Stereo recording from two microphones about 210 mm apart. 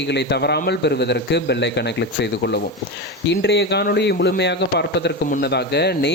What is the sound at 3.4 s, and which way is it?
Speech, 55° left (ahead or behind).